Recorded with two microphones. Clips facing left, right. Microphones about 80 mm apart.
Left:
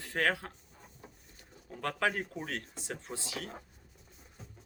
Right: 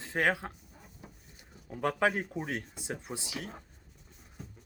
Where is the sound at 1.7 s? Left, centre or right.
Centre.